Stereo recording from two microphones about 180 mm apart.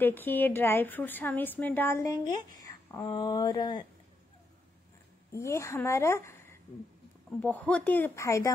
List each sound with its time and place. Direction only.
0.0 s a woman's voice: 10° left (ahead or behind)
5.3 s a woman's voice: 15° left (ahead or behind)
7.4 s a woman's voice: 10° left (ahead or behind)